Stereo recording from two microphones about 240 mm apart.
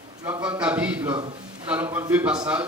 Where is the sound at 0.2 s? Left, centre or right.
Centre.